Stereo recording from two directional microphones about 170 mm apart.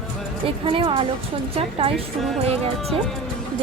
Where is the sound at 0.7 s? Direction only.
30° right (ahead or behind).